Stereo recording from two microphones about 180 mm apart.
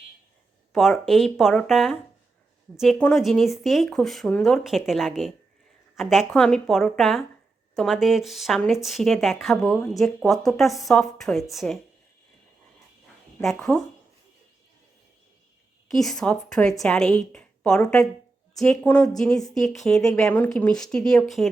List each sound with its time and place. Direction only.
0.7 s a woman's voice: centre (ahead or behind)
13.4 s a woman's voice: centre (ahead or behind)
15.9 s a woman's voice: centre (ahead or behind)